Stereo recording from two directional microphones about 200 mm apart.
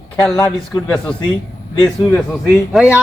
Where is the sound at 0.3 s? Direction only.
15° left (ahead or behind).